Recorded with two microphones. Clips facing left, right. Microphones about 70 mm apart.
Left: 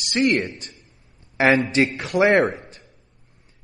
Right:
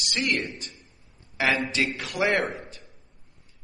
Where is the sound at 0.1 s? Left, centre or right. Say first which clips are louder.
Left 8 dB; left.